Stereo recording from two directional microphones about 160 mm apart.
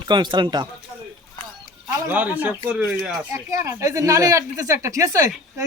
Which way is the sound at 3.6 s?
20° right (ahead or behind).